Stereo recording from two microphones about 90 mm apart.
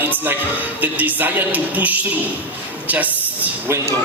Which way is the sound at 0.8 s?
20° right (ahead or behind).